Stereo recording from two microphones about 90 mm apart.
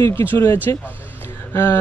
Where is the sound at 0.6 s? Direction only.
25° left (ahead or behind).